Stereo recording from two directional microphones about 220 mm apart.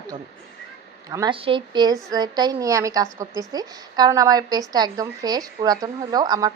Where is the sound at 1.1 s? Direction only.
20° right (ahead or behind).